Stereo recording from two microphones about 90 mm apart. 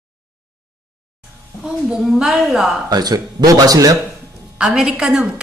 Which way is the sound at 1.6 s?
10° right (ahead or behind).